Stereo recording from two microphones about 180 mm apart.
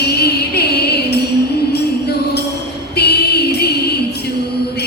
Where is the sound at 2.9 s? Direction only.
60° left (ahead or behind).